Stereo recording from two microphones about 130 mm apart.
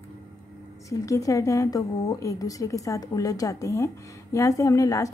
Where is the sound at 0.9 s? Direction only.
25° left (ahead or behind).